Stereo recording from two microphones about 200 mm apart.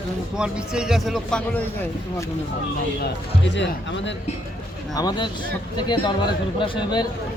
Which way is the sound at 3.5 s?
65° left (ahead or behind).